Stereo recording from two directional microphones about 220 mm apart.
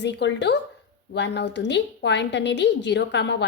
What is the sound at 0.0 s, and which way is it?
A woman's voice, 55° left (ahead or behind).